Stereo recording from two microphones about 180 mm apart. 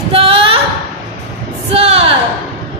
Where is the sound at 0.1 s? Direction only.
30° right (ahead or behind).